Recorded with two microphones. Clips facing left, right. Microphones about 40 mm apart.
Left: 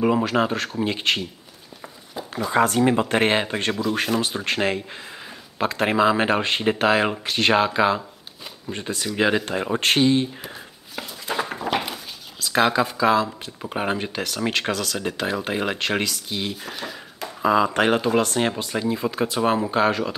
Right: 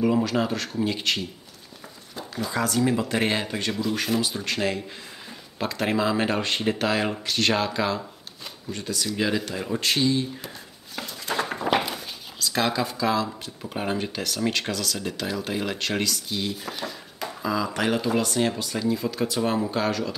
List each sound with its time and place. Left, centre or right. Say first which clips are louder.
0.0 s speech: left 3 dB; left
2.5 s speech: left 5 dB; left
11.0 s dog: left 1 dB; centre
12.4 s speech: left 5 dB; centre
16.6 s a sound: left 1 dB; centre
17.4 s speech: left 8 dB; left